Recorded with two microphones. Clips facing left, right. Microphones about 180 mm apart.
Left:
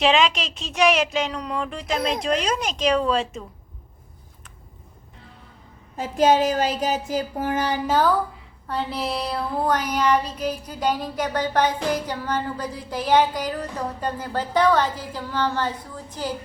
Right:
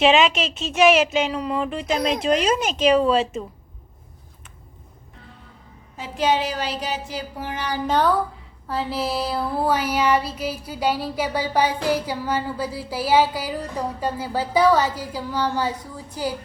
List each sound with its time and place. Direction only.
0.0 s a woman's voice: 5° right (ahead or behind)
6.0 s a woman's voice: 45° left (ahead or behind)
7.9 s a woman's voice: centre (ahead or behind)
8.6 s child singing: centre (ahead or behind)